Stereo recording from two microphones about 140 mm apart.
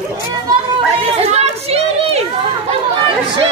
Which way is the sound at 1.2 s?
50° right (ahead or behind).